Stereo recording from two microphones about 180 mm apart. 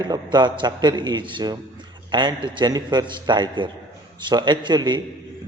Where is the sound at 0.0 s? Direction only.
25° right (ahead or behind).